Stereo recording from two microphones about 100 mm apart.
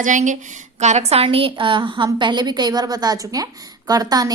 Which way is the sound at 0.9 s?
85° right.